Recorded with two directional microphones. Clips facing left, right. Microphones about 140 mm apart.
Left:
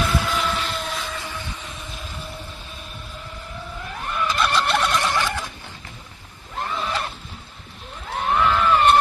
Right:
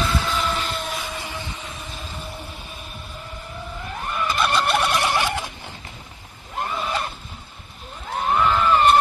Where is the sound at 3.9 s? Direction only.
Centre (ahead or behind).